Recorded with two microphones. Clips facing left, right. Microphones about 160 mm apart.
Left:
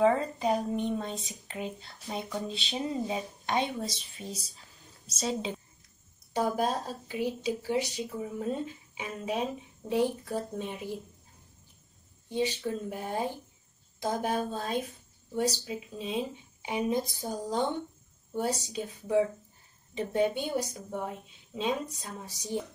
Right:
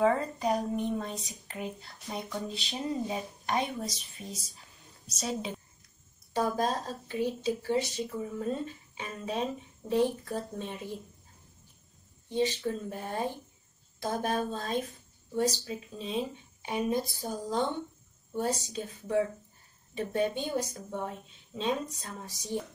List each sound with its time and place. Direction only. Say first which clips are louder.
0.0 s a woman's voice: left 2 dB; 25° left (ahead or behind)
12.3 s a woman's voice: right 1 dB; 15° left (ahead or behind)